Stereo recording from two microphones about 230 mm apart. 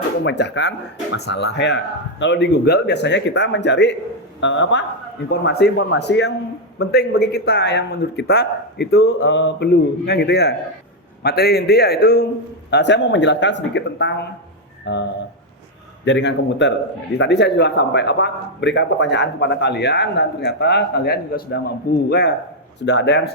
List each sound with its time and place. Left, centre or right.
0.3 s speech: left
16.0 s speech: left